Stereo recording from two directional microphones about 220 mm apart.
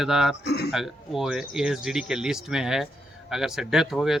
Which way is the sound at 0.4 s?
50° left (ahead or behind).